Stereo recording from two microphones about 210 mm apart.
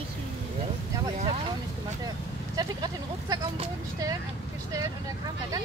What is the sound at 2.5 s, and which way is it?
Speech, 20° right (ahead or behind).